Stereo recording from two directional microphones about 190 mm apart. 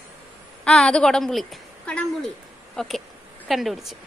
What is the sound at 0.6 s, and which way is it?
A woman's voice, 5° left (ahead or behind).